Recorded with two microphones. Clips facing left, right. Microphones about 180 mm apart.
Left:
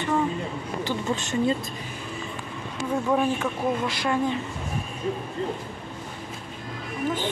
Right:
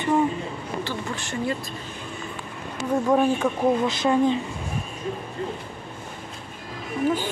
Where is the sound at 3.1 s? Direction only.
10° right (ahead or behind).